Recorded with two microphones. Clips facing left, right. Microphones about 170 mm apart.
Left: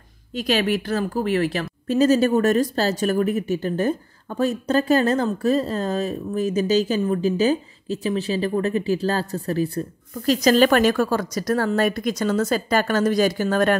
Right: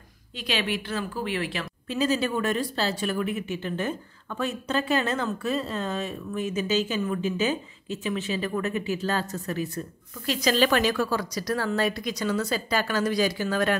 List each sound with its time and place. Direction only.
0.3 s speech: 45° left (ahead or behind)